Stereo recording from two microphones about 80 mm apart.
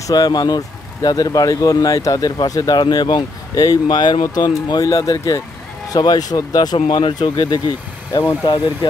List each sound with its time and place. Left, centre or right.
0.0 s speech: left